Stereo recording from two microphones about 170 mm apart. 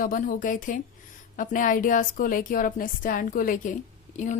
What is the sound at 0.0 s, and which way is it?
Speech, 55° left (ahead or behind).